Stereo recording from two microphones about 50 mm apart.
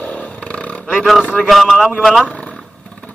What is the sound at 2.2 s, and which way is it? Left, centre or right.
Vehicle, left.